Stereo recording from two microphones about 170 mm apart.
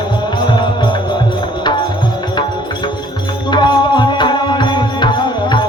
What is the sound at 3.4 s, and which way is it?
Music, 25° left (ahead or behind).